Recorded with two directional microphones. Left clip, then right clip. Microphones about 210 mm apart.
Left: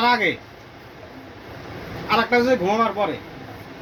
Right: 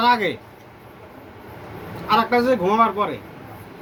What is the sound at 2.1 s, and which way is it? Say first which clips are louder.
Speech: right 1 dB; 20° right (ahead or behind).